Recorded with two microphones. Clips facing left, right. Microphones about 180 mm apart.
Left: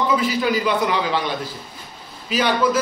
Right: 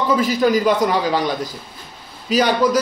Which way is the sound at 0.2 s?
45° right (ahead or behind).